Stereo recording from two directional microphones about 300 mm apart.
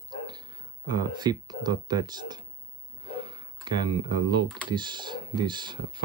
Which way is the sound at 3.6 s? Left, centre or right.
Centre.